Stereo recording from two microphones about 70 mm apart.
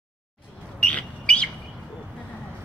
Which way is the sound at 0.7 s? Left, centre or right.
Centre.